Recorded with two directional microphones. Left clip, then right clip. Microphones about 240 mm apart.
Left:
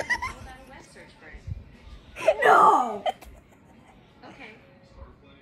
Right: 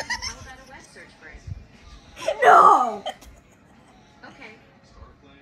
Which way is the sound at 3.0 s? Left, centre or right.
Left.